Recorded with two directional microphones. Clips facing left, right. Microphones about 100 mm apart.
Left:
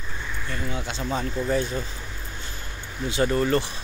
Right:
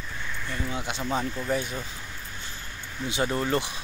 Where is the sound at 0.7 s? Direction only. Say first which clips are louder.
Left 1 dB; 15° right (ahead or behind).